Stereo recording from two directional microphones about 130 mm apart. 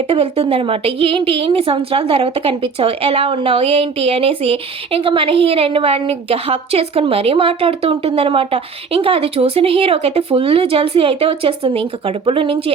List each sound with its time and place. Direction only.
0.1 s a woman's voice: 50° right (ahead or behind)